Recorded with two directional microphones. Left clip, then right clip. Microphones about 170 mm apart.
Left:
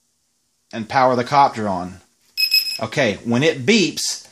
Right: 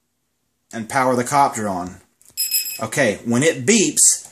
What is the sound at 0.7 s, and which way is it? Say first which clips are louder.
Speech: left 2 dB; 50° left (ahead or behind).